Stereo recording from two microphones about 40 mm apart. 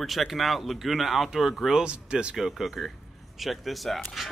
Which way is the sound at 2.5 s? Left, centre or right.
Centre.